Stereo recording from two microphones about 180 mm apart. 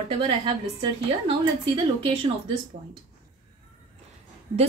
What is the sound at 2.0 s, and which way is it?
Speech, 30° right (ahead or behind).